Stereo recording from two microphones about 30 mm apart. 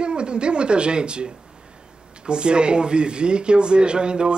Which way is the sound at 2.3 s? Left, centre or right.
Right.